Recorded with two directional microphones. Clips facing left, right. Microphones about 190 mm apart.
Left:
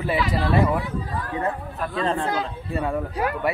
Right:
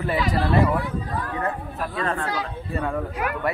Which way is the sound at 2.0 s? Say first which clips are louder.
Left 3 dB; 25° left (ahead or behind).